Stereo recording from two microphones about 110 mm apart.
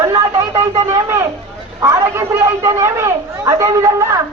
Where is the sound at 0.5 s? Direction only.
70° right (ahead or behind).